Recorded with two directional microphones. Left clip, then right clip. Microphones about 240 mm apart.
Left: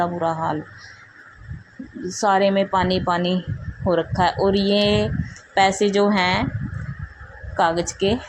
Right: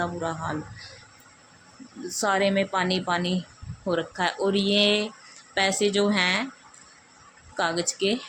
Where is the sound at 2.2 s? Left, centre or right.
Centre.